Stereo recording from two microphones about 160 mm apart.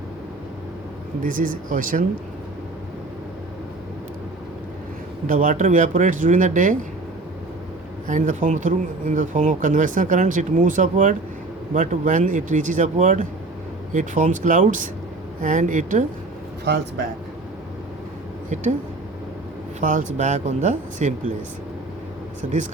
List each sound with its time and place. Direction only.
1.2 s speech: 60° right (ahead or behind)
5.2 s speech: 55° right (ahead or behind)
8.0 s speech: 55° right (ahead or behind)
19.8 s speech: 55° right (ahead or behind)